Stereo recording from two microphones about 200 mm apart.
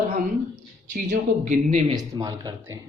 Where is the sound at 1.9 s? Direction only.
20° right (ahead or behind).